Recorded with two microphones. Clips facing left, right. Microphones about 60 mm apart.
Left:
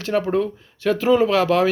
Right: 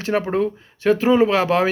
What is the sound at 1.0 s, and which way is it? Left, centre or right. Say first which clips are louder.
Speech: left 1 dB; centre.